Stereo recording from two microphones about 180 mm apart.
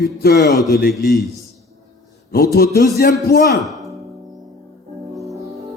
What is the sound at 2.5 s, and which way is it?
Speech, 60° left (ahead or behind).